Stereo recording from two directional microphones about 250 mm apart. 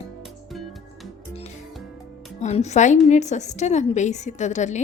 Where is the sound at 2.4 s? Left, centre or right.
Left.